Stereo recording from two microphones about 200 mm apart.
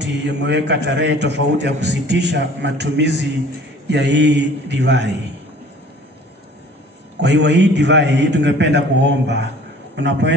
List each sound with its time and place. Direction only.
0.0 s a man's voice: 60° right (ahead or behind)
7.2 s a man's voice: 60° right (ahead or behind)